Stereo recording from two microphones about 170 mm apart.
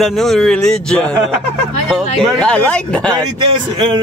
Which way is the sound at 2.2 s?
5° left (ahead or behind).